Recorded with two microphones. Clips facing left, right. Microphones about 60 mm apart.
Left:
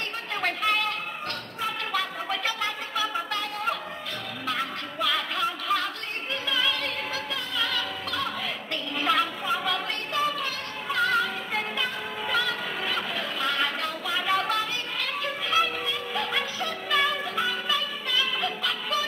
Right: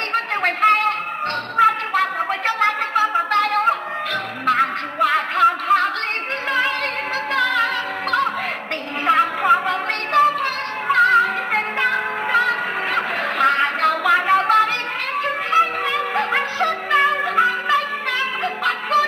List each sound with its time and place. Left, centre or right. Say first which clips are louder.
0.1 s music: right 12 dB; right
1.6 s a sound: right 13 dB; right
4.5 s music: right 13 dB; right
7.3 s music: right 14 dB; right
7.6 s music: right 8 dB; right
9.0 s a sound: right 8 dB; right
10.1 s music: right 12 dB; right
14.2 s music: right 10 dB; right
15.8 s music: right 9 dB; right
16.9 s music: right 8 dB; right